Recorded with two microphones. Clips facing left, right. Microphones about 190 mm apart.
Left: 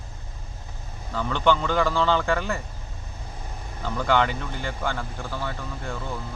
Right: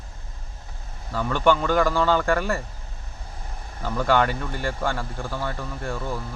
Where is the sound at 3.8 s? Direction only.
10° right (ahead or behind).